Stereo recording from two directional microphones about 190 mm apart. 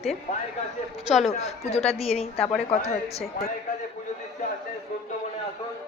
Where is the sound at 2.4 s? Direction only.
5° left (ahead or behind).